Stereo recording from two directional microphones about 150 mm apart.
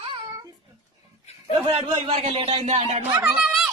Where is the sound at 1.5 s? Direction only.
30° right (ahead or behind).